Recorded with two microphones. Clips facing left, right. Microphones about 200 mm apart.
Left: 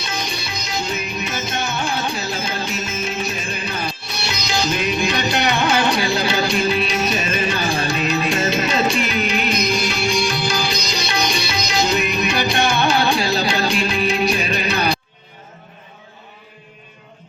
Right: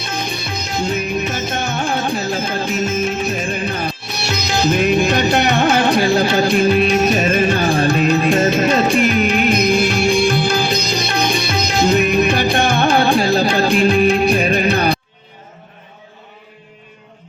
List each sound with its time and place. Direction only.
0.0 s music: 55° right (ahead or behind)